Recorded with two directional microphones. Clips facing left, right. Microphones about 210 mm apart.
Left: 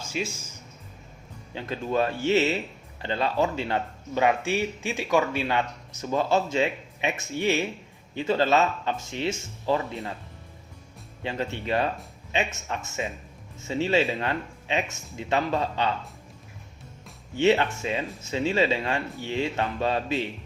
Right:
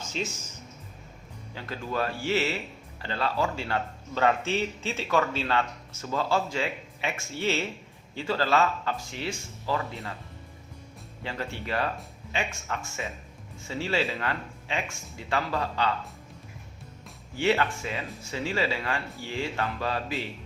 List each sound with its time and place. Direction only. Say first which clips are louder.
0.0 s speech: left 2 dB; 10° left (ahead or behind)
1.5 s speech: left 5 dB; 20° left (ahead or behind)
11.2 s speech: left 4 dB; 20° left (ahead or behind)
17.3 s speech: left 4 dB; 20° left (ahead or behind)